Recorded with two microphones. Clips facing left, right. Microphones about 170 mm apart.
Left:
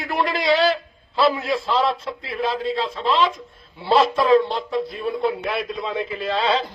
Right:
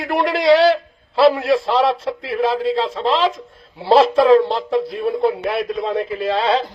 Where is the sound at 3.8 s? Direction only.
65° right (ahead or behind).